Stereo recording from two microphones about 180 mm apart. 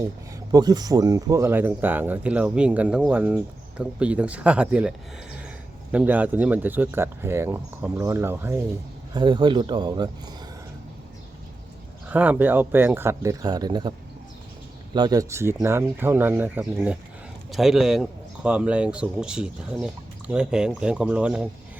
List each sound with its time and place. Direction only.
0.5 s speech: 20° right (ahead or behind)
9.1 s speech: 25° right (ahead or behind)
12.0 s speech: 10° right (ahead or behind); by 13.9 s 25° right (ahead or behind)
14.9 s speech: 20° right (ahead or behind); by 21.4 s 5° right (ahead or behind)